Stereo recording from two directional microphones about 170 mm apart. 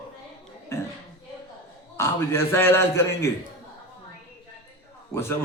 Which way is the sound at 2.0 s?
15° left (ahead or behind).